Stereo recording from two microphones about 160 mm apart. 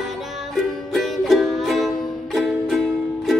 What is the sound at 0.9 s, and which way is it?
Music, centre (ahead or behind).